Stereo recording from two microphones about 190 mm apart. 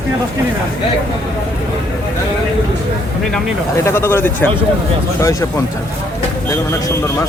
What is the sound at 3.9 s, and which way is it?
Speech, 15° left (ahead or behind).